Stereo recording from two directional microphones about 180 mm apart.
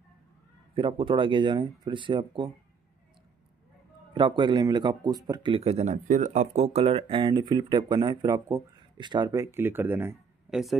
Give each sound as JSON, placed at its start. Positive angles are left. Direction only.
{"t": 0.7, "sound": "speech", "side_deg": -30}
{"t": 4.1, "sound": "speech", "side_deg": -25}